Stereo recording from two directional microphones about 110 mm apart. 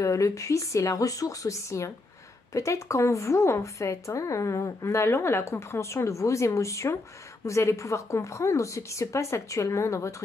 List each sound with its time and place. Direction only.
0.0 s a woman's voice: 30° left (ahead or behind)